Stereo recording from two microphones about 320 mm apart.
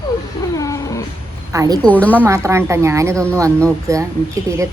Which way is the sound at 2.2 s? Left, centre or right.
Centre.